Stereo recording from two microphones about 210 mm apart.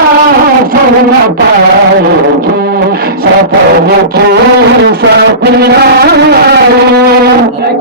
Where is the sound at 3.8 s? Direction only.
50° right (ahead or behind).